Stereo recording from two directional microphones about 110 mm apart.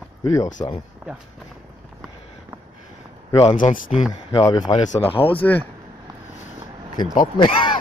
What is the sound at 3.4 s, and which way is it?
Speech, 65° left (ahead or behind).